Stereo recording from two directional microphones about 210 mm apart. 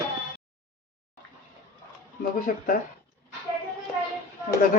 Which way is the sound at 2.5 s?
40° left (ahead or behind).